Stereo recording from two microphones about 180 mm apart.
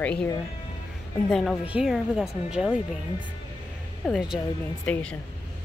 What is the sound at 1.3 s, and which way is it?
A woman's voice, centre (ahead or behind).